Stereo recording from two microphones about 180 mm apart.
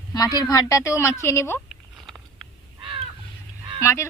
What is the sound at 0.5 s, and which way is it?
A woman's voice, 20° left (ahead or behind).